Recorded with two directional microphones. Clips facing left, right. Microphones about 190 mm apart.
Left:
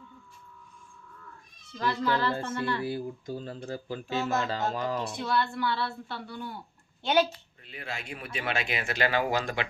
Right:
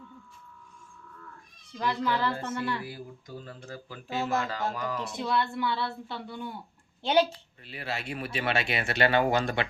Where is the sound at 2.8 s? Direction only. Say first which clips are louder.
Left 8 dB; 30° left (ahead or behind).